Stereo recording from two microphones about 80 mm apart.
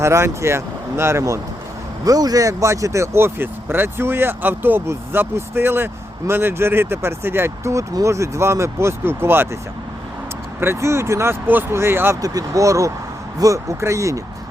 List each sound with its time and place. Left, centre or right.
0.0 s speech: right
2.0 s speech: right
10.6 s speech: right
12.2 s speech: right